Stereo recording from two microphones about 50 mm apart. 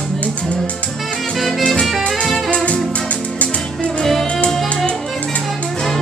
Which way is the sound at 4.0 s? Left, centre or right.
Centre.